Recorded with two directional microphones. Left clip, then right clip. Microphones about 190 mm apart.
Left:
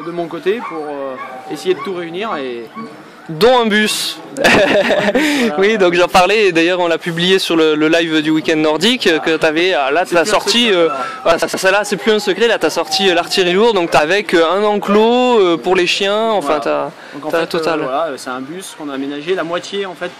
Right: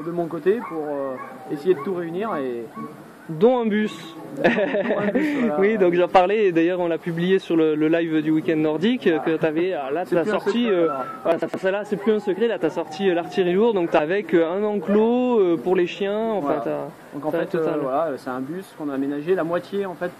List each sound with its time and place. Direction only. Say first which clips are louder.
1.7 s speech: left 4 dB; 5° left (ahead or behind)
3.5 s speech: left 11 dB; 35° left (ahead or behind)
12.6 s speech: left 9 dB; 30° left (ahead or behind)
17.8 s speech: left 5 dB; 5° left (ahead or behind)